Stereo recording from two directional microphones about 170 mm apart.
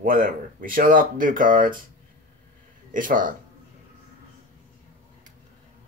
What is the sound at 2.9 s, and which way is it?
Speech, 55° right (ahead or behind).